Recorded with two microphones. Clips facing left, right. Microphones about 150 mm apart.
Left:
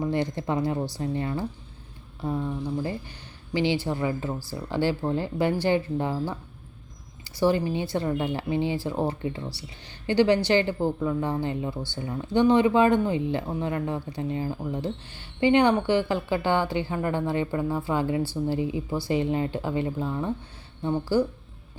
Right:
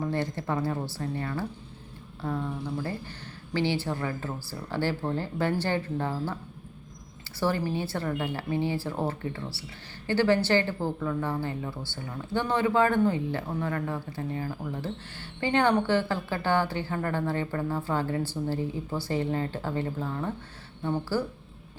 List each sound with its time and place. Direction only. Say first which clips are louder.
0.0 s speech: left 3 dB; 15° left (ahead or behind)
2.8 s speech: left 2 dB; 15° left (ahead or behind)